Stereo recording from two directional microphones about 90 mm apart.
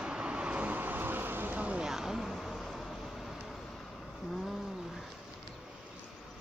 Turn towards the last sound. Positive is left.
turn(degrees=-5)  # may be behind; listen again after turning